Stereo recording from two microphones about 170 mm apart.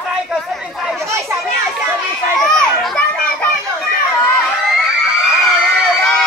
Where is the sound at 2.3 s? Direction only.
5° left (ahead or behind).